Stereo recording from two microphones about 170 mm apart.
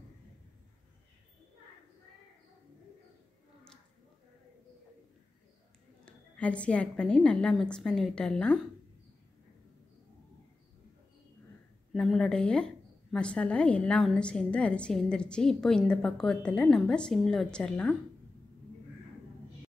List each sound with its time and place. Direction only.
6.0 s a woman's voice: 5° left (ahead or behind)
11.9 s a woman's voice: centre (ahead or behind)